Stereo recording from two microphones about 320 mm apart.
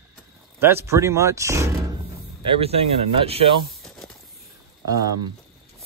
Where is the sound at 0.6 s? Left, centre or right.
Centre.